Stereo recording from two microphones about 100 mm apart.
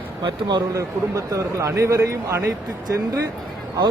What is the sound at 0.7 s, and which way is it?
Speech, 30° right (ahead or behind).